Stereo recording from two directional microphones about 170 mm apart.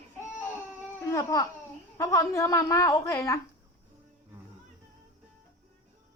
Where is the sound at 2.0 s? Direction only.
20° left (ahead or behind).